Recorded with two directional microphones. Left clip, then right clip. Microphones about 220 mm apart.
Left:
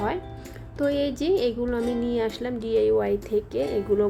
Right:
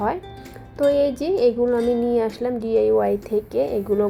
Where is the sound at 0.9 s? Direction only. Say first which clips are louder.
Right 5 dB; 10° left (ahead or behind).